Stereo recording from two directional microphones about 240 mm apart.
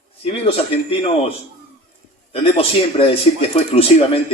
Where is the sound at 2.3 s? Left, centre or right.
Left.